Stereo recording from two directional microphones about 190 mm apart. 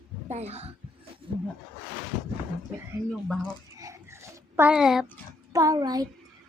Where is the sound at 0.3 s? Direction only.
35° right (ahead or behind).